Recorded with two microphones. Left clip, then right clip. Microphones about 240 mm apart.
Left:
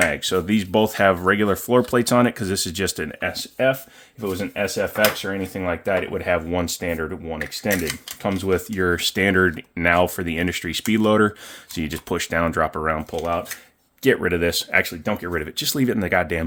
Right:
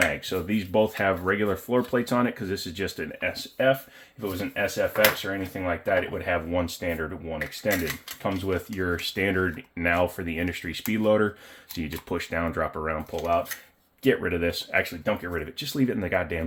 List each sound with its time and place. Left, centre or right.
0.2 s speech: left